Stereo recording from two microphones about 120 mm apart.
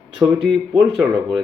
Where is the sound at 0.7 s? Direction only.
5° right (ahead or behind).